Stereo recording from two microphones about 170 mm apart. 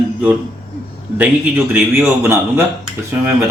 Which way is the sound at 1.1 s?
10° right (ahead or behind).